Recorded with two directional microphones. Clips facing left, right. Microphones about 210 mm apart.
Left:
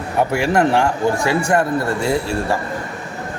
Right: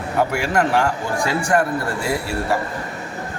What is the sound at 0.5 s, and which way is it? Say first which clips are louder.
A man's voice: left 2 dB; 25° left (ahead or behind).